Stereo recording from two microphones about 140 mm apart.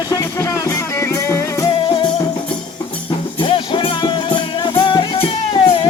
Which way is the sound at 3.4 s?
35° left (ahead or behind).